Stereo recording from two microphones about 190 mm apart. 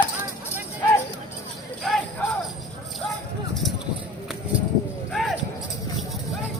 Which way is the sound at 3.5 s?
Centre (ahead or behind).